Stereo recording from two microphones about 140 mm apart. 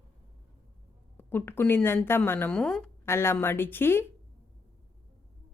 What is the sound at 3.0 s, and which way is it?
A woman's voice, 15° left (ahead or behind).